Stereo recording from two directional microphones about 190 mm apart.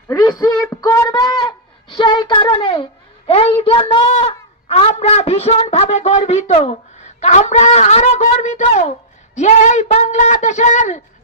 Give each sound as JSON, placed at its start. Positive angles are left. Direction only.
{"t": 0.1, "sound": "a woman's voice", "side_deg": 20}